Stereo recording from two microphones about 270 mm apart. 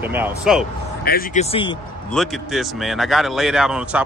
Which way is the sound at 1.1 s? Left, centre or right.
Left.